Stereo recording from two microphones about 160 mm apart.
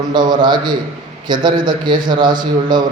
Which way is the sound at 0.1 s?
25° right (ahead or behind).